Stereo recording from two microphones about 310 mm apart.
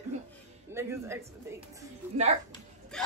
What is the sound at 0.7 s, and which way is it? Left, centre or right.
Speech, centre.